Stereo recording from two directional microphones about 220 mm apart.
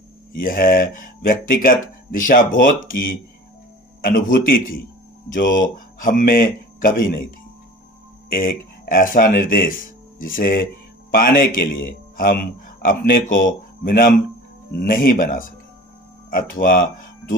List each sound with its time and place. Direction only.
0.3 s speech: 40° left (ahead or behind)
8.3 s speech: 40° left (ahead or behind)